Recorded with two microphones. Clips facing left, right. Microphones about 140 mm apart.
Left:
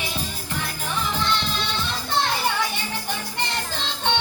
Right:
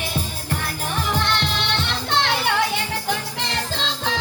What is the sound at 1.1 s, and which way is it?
Music, 65° right (ahead or behind).